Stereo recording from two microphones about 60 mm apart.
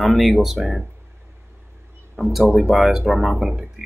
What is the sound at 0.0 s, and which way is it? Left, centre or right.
Speech, centre.